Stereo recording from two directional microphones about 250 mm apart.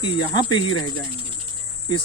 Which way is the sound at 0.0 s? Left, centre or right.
Centre.